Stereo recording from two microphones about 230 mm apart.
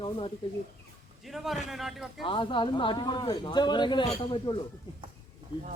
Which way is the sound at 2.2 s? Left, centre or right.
Left.